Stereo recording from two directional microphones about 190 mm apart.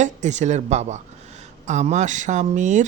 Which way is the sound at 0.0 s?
40° right (ahead or behind).